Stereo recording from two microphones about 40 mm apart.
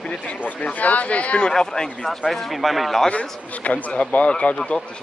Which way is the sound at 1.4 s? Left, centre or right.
Centre.